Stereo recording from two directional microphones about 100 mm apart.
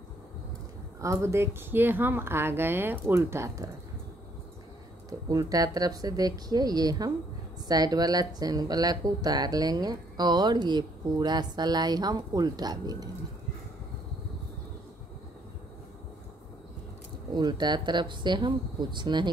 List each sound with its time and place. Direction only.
1.0 s speech: 30° right (ahead or behind)
5.3 s speech: 40° right (ahead or behind)
17.3 s speech: 45° right (ahead or behind)